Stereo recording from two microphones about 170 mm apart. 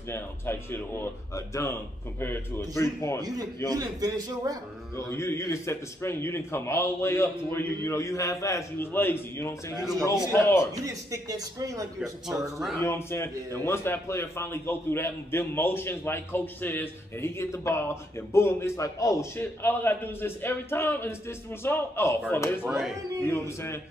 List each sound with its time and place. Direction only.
0.1 s a man's voice: 15° left (ahead or behind)
3.2 s a man's voice: 20° right (ahead or behind)
4.9 s a man's voice: 15° left (ahead or behind)
9.8 s speech: centre (ahead or behind)
10.2 s a man's voice: 15° left (ahead or behind)
10.9 s a man's voice: 20° right (ahead or behind)
12.5 s speech: centre (ahead or behind)
12.8 s a man's voice: 15° left (ahead or behind)
22.7 s speech: centre (ahead or behind)